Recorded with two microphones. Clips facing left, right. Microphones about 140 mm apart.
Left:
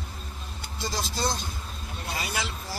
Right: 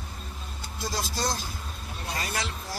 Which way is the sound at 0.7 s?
Centre (ahead or behind).